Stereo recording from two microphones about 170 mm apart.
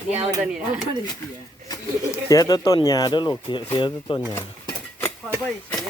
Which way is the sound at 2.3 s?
20° left (ahead or behind).